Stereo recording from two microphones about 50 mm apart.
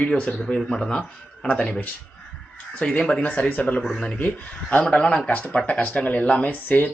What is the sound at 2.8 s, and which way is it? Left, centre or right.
Speech, centre.